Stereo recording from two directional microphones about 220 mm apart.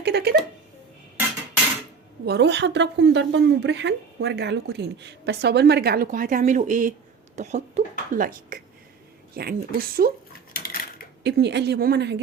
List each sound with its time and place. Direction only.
0.0 s speech: 50° right (ahead or behind)
2.2 s a woman's voice: 50° right (ahead or behind)
10.6 s a sound: 40° left (ahead or behind)
11.2 s a woman's voice: 50° right (ahead or behind)